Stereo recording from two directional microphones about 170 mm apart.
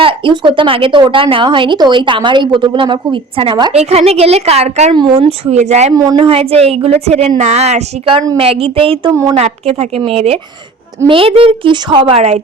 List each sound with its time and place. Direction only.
0.0 s a woman's voice: 30° right (ahead or behind)
5.9 s a woman's voice: 25° right (ahead or behind)